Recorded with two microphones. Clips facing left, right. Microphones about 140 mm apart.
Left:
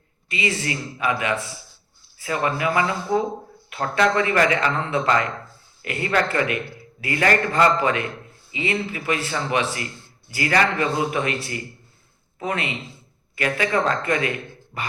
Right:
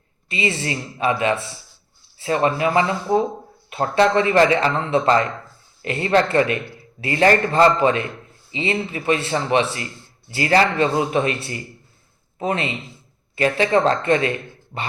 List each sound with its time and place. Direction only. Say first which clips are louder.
0.3 s speech: right 2 dB; 25° right (ahead or behind)
12.4 s speech: right 3 dB; 25° right (ahead or behind)